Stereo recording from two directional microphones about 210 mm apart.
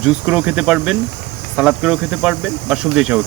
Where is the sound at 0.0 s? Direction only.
5° right (ahead or behind).